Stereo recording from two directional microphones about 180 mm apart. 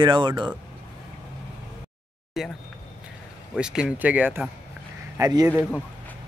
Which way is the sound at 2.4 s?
Centre (ahead or behind).